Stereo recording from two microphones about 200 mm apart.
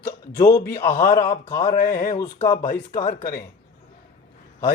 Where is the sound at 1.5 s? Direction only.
20° left (ahead or behind).